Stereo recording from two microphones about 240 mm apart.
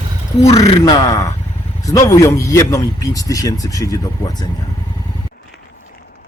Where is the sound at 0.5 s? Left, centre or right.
Centre.